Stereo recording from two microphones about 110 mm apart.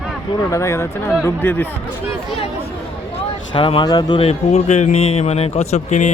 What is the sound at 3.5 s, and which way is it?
Speech, 55° left (ahead or behind).